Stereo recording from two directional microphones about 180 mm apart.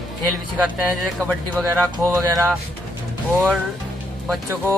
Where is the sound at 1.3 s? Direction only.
10° right (ahead or behind).